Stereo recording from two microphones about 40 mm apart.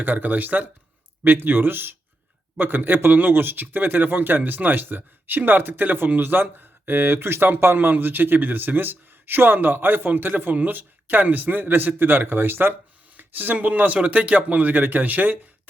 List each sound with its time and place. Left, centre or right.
0.0 s a man's voice: right
1.2 s speech: right
13.1 s a man's voice: right
14.8 s a man's voice: right